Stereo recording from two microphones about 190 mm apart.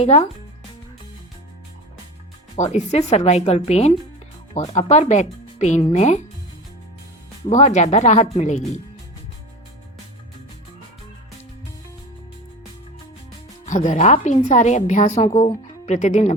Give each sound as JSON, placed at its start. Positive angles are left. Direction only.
{"t": 0.0, "sound": "speech", "side_deg": 35}
{"t": 2.6, "sound": "speech", "side_deg": 35}
{"t": 7.5, "sound": "speech", "side_deg": 35}
{"t": 13.7, "sound": "speech", "side_deg": 40}
{"t": 15.2, "sound": "speech", "side_deg": 20}
{"t": 15.4, "sound": "speech", "side_deg": 40}